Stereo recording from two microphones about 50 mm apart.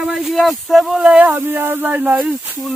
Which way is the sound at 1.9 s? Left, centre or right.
Right.